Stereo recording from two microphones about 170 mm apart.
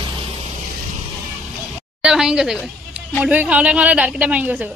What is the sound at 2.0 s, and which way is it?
A woman's voice, 5° right (ahead or behind).